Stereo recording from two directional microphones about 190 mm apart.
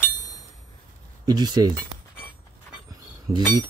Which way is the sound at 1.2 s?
20° right (ahead or behind).